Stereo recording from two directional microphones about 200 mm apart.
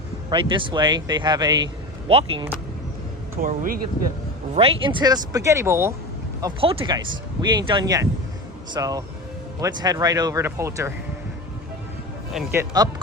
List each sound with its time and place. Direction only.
0.3 s speech: 25° right (ahead or behind)
3.4 s speech: 45° right (ahead or behind)
4.5 s speech: 30° right (ahead or behind)
6.4 s speech: 25° right (ahead or behind)
12.3 s speech: centre (ahead or behind)
12.5 s speech: 20° right (ahead or behind)